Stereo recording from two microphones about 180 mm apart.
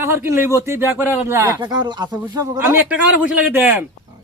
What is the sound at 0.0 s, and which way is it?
Speech, 15° right (ahead or behind).